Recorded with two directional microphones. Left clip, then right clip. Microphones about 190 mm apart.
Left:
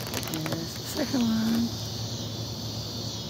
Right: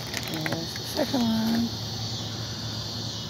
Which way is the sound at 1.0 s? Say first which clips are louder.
Right 2 dB; centre (ahead or behind).